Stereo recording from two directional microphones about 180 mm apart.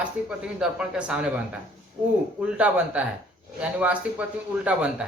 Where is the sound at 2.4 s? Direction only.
5° right (ahead or behind).